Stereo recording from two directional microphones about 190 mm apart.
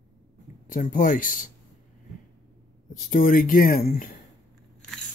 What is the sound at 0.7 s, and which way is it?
Speech, 45° left (ahead or behind).